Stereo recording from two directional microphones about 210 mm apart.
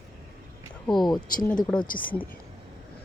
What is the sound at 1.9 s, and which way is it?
Speech, 40° left (ahead or behind).